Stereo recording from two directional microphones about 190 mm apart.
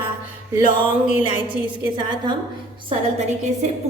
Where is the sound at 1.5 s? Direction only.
25° right (ahead or behind).